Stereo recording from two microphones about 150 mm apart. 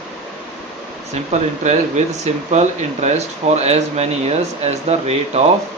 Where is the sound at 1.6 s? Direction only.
50° right (ahead or behind).